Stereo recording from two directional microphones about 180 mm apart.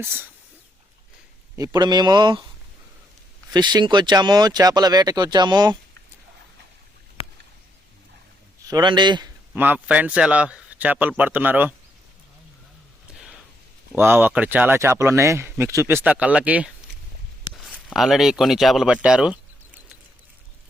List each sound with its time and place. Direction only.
0.0 s speech: 10° right (ahead or behind)
1.5 s speech: 20° right (ahead or behind)
3.5 s speech: 25° right (ahead or behind)
8.6 s speech: 25° right (ahead or behind)
9.6 s speech: 10° right (ahead or behind)
13.1 s a sound: centre (ahead or behind)
13.9 s speech: 15° right (ahead or behind)